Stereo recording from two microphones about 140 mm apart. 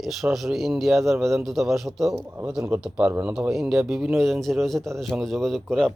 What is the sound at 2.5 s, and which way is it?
Speech, 5° right (ahead or behind).